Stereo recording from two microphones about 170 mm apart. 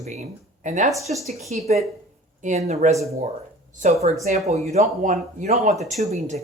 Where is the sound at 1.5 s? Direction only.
40° right (ahead or behind).